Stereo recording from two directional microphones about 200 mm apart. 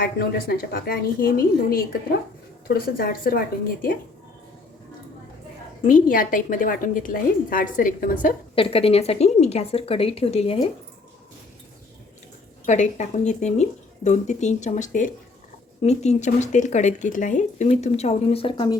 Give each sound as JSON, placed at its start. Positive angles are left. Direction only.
{"t": 0.0, "sound": "a woman's voice", "side_deg": 50}
{"t": 2.6, "sound": "a woman's voice", "side_deg": 45}
{"t": 5.9, "sound": "a woman's voice", "side_deg": 45}
{"t": 8.5, "sound": "a woman's voice", "side_deg": 30}
{"t": 12.6, "sound": "speech", "side_deg": 35}